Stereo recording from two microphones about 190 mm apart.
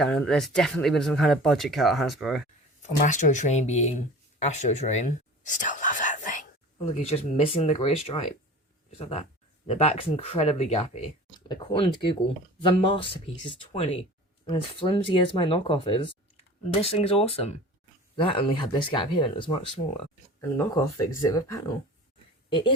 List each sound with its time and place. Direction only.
0.0 s speech: 5° left (ahead or behind)
3.0 s speech: 40° left (ahead or behind)
4.4 s whispering: 35° left (ahead or behind)
6.7 s speech: 30° left (ahead or behind)
11.3 s speech: 25° left (ahead or behind)
21.2 s speech: 15° left (ahead or behind)